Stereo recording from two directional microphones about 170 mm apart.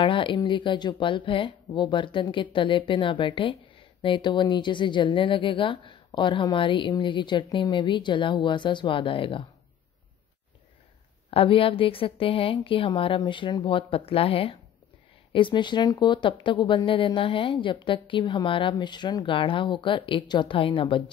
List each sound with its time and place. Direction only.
0.0 s speech: 30° left (ahead or behind)
11.2 s a woman's voice: 30° left (ahead or behind)